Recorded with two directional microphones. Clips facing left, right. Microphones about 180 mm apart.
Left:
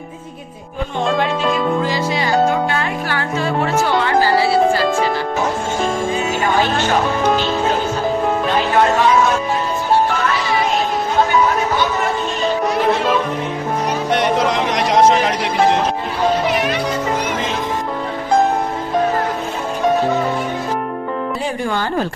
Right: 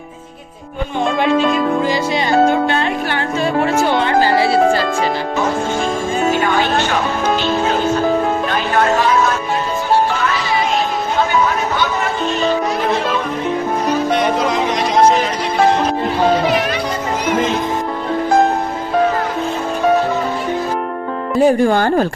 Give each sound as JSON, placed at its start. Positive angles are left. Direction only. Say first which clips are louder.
{"t": 2.7, "sound": "music", "louder": "right 3 dB", "side_deg": -20}
{"t": 21.4, "sound": "speech", "louder": "right 9 dB", "side_deg": -45}